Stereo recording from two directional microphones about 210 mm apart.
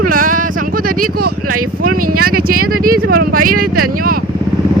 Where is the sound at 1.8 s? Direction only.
90° right.